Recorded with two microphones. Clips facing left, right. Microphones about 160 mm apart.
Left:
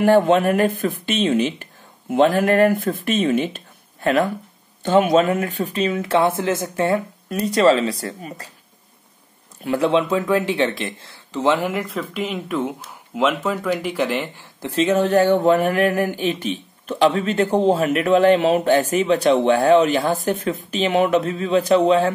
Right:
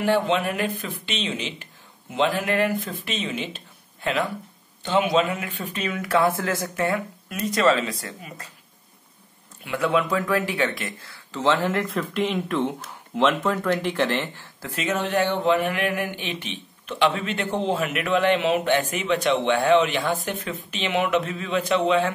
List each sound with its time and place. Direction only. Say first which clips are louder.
0.0 s speech: left 7 dB; 45° left (ahead or behind)
9.6 s speech: left 5 dB; 35° left (ahead or behind)
11.4 s speech: left 2 dB; 10° left (ahead or behind)
11.8 s speech: right 1 dB; centre (ahead or behind)
14.8 s speech: left 8 dB; 35° left (ahead or behind)